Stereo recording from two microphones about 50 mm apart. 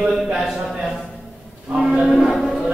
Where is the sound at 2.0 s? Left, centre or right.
Centre.